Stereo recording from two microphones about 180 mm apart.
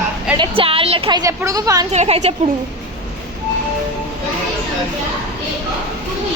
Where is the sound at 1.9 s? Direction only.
40° right (ahead or behind).